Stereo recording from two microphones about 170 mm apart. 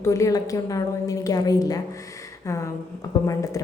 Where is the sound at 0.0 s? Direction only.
20° left (ahead or behind).